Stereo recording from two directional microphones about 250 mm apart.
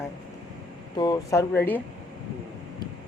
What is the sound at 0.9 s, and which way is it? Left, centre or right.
Speech, centre.